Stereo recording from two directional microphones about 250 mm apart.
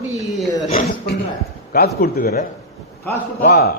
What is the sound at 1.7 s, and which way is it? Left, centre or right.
A man's voice, left.